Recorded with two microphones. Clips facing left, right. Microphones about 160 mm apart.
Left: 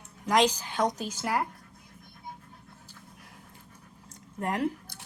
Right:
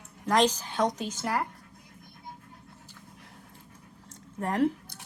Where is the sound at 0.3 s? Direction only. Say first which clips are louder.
Even; 10° left (ahead or behind).